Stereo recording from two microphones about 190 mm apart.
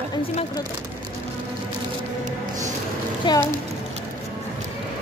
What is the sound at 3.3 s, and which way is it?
Speech, 25° left (ahead or behind).